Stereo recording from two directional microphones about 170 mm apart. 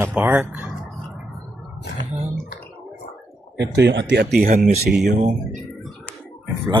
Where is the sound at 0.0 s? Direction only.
10° right (ahead or behind).